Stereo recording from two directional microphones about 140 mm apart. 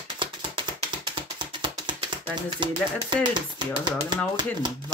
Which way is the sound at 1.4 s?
35° right (ahead or behind).